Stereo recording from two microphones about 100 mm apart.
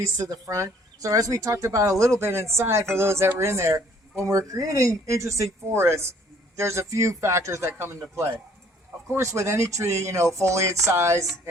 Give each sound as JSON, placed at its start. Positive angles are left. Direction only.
{"t": 0.2, "sound": "speech", "side_deg": -30}